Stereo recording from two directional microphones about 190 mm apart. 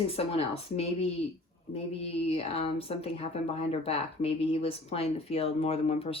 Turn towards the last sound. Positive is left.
turn(degrees=30)  # may be behind; listen again after turning